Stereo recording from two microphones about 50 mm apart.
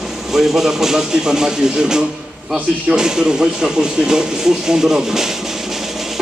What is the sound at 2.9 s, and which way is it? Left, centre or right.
Speech, centre.